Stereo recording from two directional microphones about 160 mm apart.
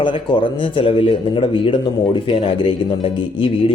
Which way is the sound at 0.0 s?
30° left (ahead or behind).